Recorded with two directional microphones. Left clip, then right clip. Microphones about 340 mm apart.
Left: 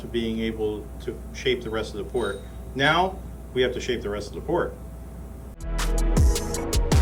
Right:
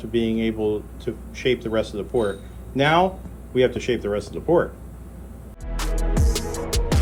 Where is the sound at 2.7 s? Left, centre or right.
Right.